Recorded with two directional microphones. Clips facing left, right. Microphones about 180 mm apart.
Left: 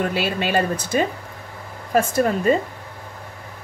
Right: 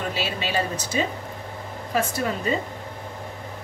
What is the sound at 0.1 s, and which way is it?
Speech, 55° left (ahead or behind).